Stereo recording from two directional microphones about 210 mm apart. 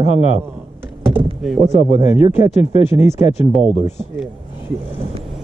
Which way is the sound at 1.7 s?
30° left (ahead or behind).